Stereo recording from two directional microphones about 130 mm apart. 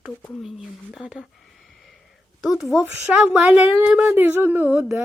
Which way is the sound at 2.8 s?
10° right (ahead or behind).